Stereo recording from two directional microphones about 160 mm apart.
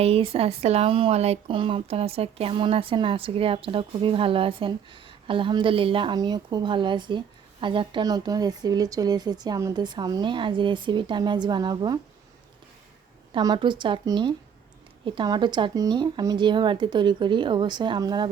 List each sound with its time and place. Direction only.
0.0 s speech: 35° right (ahead or behind)
13.3 s speech: 30° right (ahead or behind)